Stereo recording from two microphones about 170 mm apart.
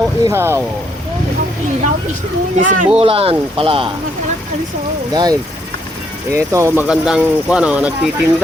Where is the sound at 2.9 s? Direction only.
35° right (ahead or behind).